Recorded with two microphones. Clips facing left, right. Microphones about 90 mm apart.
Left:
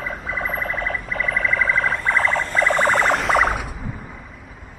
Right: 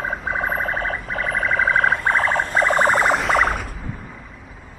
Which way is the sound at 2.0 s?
40° right (ahead or behind).